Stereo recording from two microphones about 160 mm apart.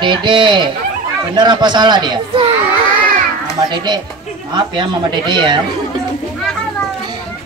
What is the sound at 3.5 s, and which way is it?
Speech, 25° right (ahead or behind).